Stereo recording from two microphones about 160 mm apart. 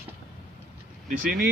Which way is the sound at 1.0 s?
60° right (ahead or behind).